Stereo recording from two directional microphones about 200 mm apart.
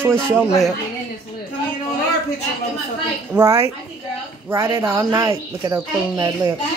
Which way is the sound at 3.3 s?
15° right (ahead or behind).